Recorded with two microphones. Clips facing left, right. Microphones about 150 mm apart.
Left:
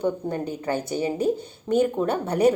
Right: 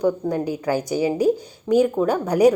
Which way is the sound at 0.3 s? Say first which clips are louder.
Right 4 dB; 10° right (ahead or behind).